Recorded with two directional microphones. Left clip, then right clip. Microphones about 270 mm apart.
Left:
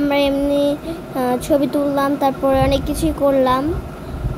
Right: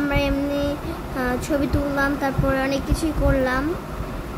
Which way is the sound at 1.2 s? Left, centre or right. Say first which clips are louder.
Left 6 dB; centre.